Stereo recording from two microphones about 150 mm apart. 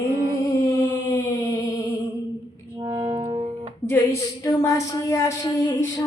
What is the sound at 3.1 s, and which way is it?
Music, 35° right (ahead or behind).